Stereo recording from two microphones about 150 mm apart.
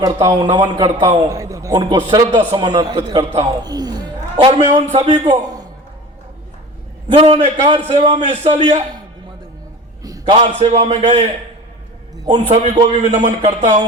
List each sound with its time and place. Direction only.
0.0 s a man's voice: 20° right (ahead or behind)
7.1 s a man's voice: 40° right (ahead or behind)
7.9 s a man's voice: 50° right (ahead or behind)
10.0 s a sound: 25° right (ahead or behind)
10.3 s a man's voice: 45° right (ahead or behind)
12.2 s a man's voice: 30° right (ahead or behind)
13.1 s a man's voice: 45° right (ahead or behind)